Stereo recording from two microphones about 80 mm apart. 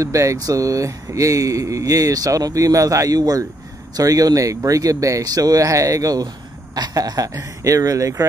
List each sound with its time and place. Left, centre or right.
0.0 s speech: right